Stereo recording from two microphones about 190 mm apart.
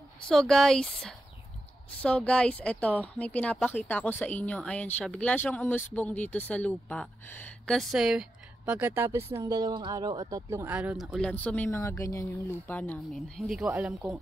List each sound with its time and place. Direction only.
0.3 s speech: 5° left (ahead or behind)